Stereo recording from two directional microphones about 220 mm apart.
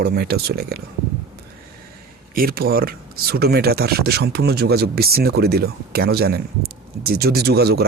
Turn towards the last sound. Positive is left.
turn(degrees=-45)  # may be behind; listen again after turning